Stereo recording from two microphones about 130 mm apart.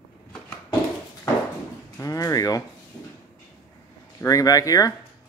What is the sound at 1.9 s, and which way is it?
Speech, 25° left (ahead or behind).